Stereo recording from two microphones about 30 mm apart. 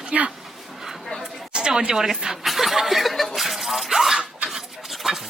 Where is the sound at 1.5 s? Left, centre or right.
Right.